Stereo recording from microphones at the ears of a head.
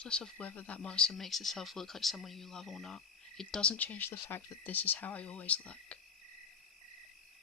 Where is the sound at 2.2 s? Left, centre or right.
Left.